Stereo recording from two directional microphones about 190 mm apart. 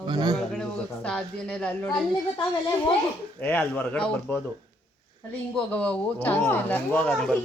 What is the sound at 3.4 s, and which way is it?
Speech, 10° left (ahead or behind).